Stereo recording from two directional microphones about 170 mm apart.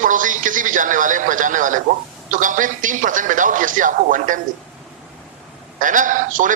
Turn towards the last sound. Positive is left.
turn(degrees=-50)  # may be behind; listen again after turning